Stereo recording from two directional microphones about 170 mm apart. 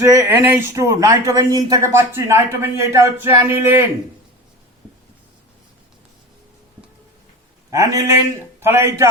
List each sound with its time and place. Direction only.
0.0 s speech: 15° right (ahead or behind)
7.7 s a man's voice: 20° right (ahead or behind)